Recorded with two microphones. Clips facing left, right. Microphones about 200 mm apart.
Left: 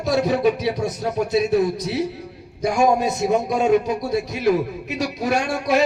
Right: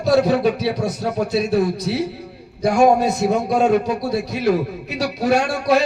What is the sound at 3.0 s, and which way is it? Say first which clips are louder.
A man's voice: right 2 dB; 20° left (ahead or behind).